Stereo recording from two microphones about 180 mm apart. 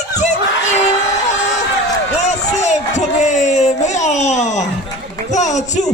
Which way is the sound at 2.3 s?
40° left (ahead or behind).